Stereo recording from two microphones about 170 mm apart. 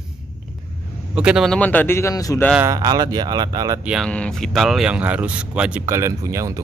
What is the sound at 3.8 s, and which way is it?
Speech, 5° right (ahead or behind).